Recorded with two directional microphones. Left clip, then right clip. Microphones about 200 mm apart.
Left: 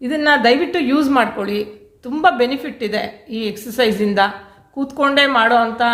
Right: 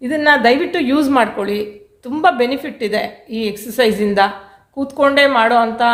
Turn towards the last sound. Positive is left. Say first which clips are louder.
# right 1 dB
turn(degrees=-10)  # may be behind; listen again after turning